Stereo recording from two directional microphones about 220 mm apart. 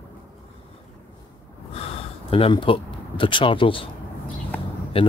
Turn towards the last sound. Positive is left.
turn(degrees=25)  # may be behind; listen again after turning